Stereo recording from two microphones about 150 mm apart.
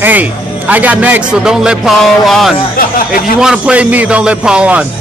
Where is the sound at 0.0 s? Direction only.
10° right (ahead or behind).